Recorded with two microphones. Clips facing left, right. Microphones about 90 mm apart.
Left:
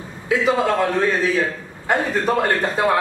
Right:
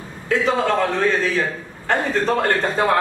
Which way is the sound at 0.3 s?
5° left (ahead or behind).